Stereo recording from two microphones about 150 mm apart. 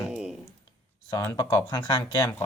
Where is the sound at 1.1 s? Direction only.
20° left (ahead or behind).